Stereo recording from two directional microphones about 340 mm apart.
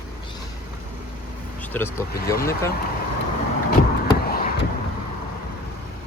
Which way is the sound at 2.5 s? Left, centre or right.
Centre.